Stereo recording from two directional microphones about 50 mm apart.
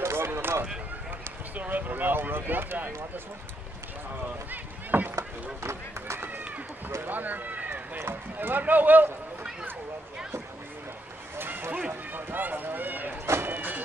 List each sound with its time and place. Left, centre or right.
0.0 s a sound: right
1.5 s speech: right
4.5 s rowboat: right
5.1 s run: right
7.0 s a sound: right
8.0 s speech: right
11.3 s a sound: right
11.9 s speech: right
13.5 s music: right